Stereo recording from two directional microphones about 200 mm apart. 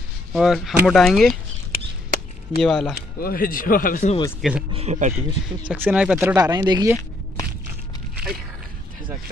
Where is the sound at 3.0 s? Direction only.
45° left (ahead or behind).